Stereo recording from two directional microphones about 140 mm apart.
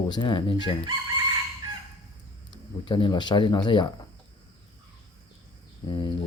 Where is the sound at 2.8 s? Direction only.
35° left (ahead or behind).